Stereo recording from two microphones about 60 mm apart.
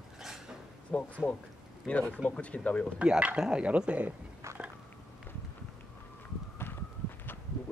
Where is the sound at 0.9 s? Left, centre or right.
Centre.